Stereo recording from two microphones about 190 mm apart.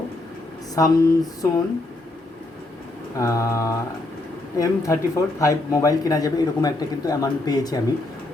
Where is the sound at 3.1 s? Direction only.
15° left (ahead or behind).